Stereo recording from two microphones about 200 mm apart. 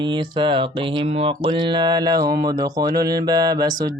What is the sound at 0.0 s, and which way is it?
Mantra, 25° right (ahead or behind).